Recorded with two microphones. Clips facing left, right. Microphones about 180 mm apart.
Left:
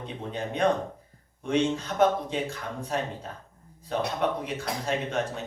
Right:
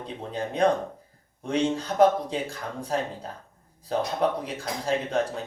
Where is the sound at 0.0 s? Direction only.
35° right (ahead or behind).